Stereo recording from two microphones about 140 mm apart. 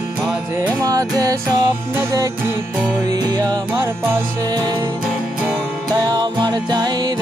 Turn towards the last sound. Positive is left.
turn(degrees=-30)  # may be behind; listen again after turning